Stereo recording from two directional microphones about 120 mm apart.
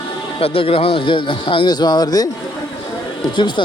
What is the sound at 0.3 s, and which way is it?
Speech, 50° left (ahead or behind).